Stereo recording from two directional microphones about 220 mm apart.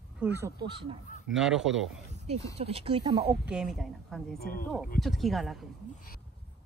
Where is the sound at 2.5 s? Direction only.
25° right (ahead or behind).